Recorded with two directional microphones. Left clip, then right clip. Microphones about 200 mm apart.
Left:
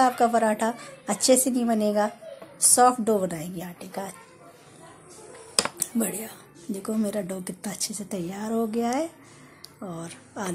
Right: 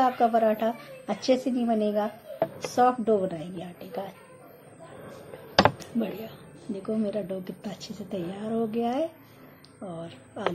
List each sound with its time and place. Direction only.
0.0 s a woman's voice: 45° left (ahead or behind)
5.8 s a woman's voice: 40° left (ahead or behind)